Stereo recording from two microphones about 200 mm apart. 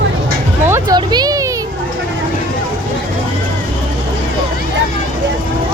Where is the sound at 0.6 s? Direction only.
15° right (ahead or behind).